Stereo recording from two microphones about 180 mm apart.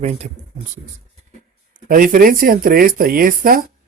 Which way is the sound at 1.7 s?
50° right (ahead or behind).